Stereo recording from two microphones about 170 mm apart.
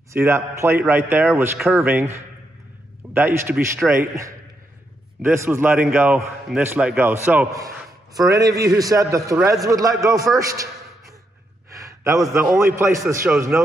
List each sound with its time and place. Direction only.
0.1 s a man's voice: 15° right (ahead or behind)
11.7 s gasp: 20° right (ahead or behind)
12.5 s a man's voice: 15° right (ahead or behind)